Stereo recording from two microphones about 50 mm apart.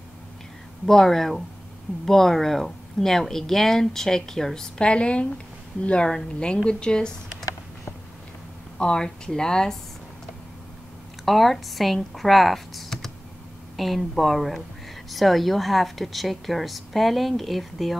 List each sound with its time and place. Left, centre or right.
0.8 s a woman's voice: centre
8.7 s speech: centre
11.2 s a woman's voice: centre